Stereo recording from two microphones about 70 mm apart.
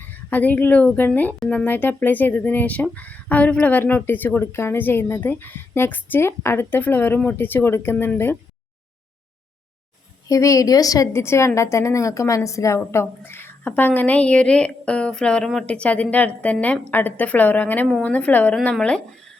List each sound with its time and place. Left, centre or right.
0.3 s a woman's voice: left
10.2 s a woman's voice: left
11.1 s a woman's voice: left; by 19.0 s centre